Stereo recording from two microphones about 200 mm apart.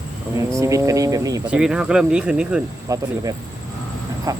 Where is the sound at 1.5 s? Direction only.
5° right (ahead or behind).